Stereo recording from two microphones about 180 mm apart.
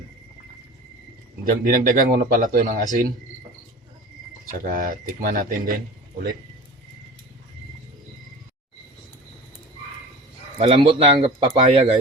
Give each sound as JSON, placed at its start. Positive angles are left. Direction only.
{"t": 1.6, "sound": "speech", "side_deg": -50}
{"t": 4.6, "sound": "speech", "side_deg": -50}
{"t": 10.6, "sound": "speech", "side_deg": -30}